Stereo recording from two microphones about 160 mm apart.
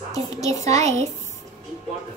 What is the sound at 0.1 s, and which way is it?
Speech, 20° left (ahead or behind).